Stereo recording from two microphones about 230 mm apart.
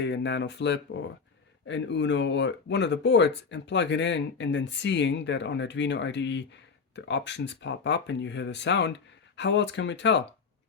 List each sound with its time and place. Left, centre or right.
0.0 s speech: left